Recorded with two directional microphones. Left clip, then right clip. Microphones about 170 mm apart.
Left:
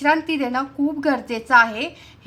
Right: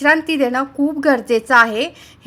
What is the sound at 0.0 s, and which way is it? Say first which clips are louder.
A woman's voice: right 5 dB; 25° right (ahead or behind).